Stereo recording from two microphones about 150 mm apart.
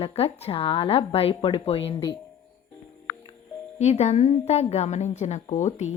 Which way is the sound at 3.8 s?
50° left (ahead or behind).